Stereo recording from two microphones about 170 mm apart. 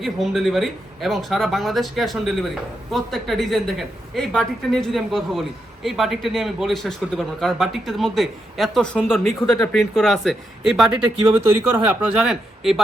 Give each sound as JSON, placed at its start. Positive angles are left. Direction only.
{"t": 0.0, "sound": "speech", "side_deg": 0}